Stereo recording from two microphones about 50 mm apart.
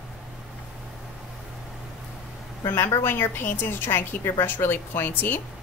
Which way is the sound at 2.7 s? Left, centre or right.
Left.